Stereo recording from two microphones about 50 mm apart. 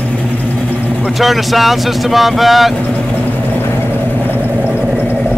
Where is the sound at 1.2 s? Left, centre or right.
Centre.